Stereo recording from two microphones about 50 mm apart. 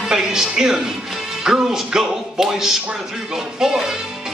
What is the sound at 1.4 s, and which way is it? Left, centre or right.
Music, centre.